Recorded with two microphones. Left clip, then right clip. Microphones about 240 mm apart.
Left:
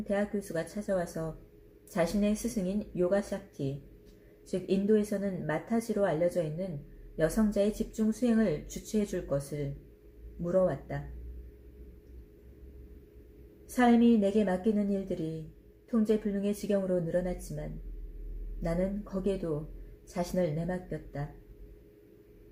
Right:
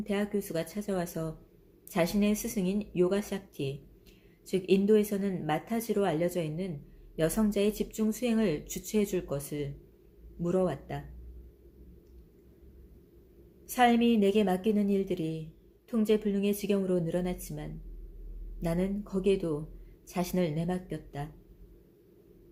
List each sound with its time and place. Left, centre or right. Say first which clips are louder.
0.0 s speech: even; right
10.4 s speech: left 2 dB; right
13.7 s speech: right 1 dB; right
18.6 s speech: even; right